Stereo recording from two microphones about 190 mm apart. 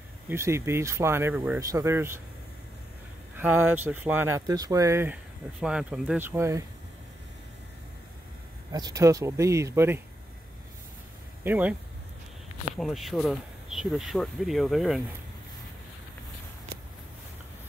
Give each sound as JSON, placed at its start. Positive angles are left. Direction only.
{"t": 0.3, "sound": "speech", "side_deg": -15}
{"t": 3.3, "sound": "speech", "side_deg": -10}
{"t": 8.7, "sound": "speech", "side_deg": -20}
{"t": 11.4, "sound": "speech", "side_deg": -10}
{"t": 12.7, "sound": "speech", "side_deg": 0}